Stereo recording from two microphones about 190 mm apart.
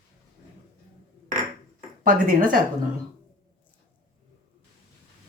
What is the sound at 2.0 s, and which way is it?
Speech, 50° right (ahead or behind).